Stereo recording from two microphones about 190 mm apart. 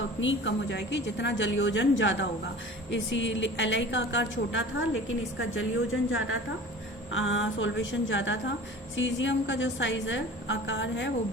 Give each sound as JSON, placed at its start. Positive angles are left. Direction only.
{"t": 0.2, "sound": "a woman's voice", "side_deg": 75}
{"t": 5.4, "sound": "a woman's voice", "side_deg": 90}